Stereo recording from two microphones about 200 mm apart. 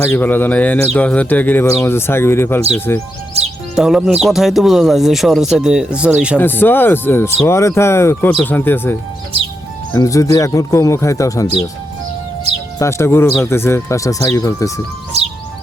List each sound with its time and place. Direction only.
0.0 s speech: 10° left (ahead or behind)
3.8 s speech: centre (ahead or behind)
6.4 s speech: 10° left (ahead or behind)
12.8 s speech: 15° left (ahead or behind)
15.1 s music: 30° right (ahead or behind)